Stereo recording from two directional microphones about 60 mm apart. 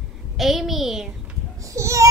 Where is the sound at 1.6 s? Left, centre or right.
Right.